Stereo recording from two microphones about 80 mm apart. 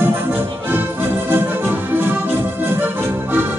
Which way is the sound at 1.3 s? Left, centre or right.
Right.